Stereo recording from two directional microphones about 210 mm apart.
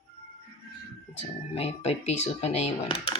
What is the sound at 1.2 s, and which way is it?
Speech, 30° left (ahead or behind).